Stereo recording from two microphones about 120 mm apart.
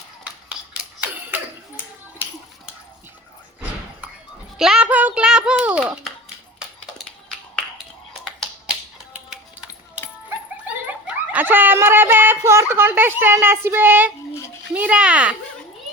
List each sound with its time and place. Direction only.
0.4 s a sound: 10° right (ahead or behind)
4.5 s a child's voice: 5° right (ahead or behind)
8.2 s finger snapping: 5° right (ahead or behind)
11.0 s speech: 10° right (ahead or behind)